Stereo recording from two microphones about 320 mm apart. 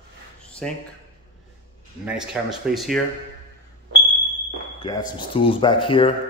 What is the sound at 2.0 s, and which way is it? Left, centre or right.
Speech, centre.